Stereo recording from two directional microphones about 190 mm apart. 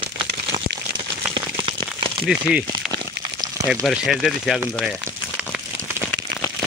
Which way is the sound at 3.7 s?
Centre (ahead or behind).